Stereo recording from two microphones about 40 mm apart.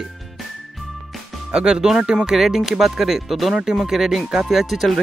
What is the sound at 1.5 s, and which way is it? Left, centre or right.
Speech, centre.